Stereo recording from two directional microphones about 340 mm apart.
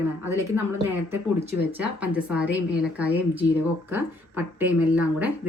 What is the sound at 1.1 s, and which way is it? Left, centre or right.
Speech, centre.